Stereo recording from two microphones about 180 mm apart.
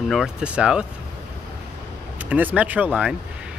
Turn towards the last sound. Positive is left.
turn(degrees=-10)  # may be behind; listen again after turning